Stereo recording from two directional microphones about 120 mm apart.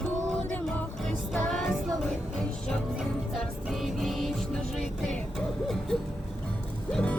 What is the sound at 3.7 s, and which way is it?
Music, centre (ahead or behind).